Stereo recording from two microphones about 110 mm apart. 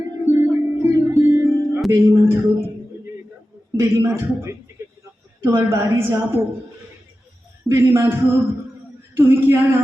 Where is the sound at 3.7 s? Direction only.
25° right (ahead or behind).